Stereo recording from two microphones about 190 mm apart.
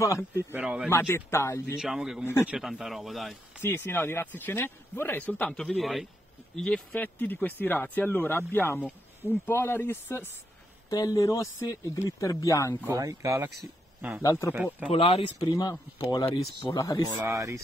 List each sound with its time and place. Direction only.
0.0 s speech: 15° left (ahead or behind)
0.4 s speech: 10° right (ahead or behind)
0.8 s speech: 15° left (ahead or behind)
1.8 s speech: centre (ahead or behind)
3.6 s speech: 10° left (ahead or behind)
12.8 s speech: 15° right (ahead or behind)
14.5 s speech: 10° right (ahead or behind)
14.9 s speech: 30° left (ahead or behind)
17.2 s speech: 15° right (ahead or behind)